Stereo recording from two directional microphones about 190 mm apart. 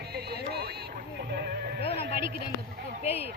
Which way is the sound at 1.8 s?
30° left (ahead or behind).